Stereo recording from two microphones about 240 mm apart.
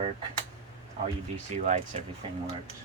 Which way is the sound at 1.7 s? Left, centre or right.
Right.